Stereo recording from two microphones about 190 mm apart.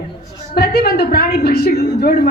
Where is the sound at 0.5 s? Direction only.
55° left (ahead or behind).